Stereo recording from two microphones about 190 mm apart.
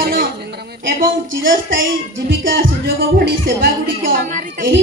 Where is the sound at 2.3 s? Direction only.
50° right (ahead or behind).